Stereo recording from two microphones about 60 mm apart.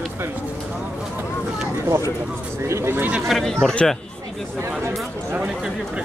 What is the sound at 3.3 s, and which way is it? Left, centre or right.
Speech, centre.